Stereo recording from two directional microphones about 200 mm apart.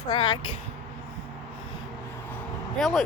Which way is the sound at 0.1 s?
25° left (ahead or behind).